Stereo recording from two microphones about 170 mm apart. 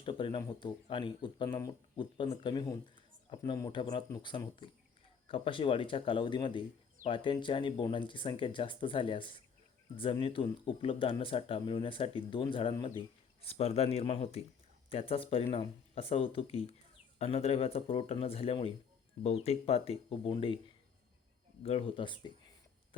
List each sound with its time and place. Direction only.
0.0 s speech: 30° left (ahead or behind)
21.6 s speech: 35° left (ahead or behind)